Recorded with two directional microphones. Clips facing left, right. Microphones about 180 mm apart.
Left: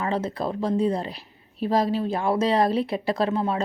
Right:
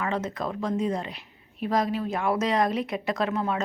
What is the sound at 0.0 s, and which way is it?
A woman's voice, 30° left (ahead or behind).